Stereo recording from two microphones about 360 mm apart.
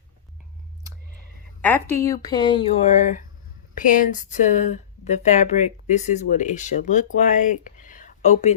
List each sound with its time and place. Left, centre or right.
1.6 s speech: centre